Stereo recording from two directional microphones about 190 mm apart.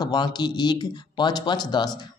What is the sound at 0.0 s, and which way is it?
Speech, 20° left (ahead or behind).